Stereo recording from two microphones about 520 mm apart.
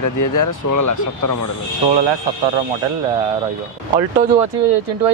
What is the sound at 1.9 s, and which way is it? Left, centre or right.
Speech, right.